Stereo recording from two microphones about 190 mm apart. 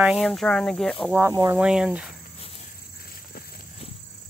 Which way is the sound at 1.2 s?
15° right (ahead or behind).